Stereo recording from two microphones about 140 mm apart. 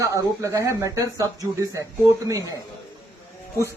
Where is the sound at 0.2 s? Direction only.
25° right (ahead or behind).